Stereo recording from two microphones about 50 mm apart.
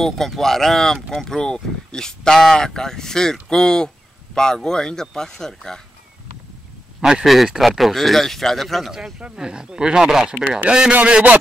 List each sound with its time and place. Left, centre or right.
0.0 s speech: centre
7.0 s speech: centre
8.9 s a man's voice: centre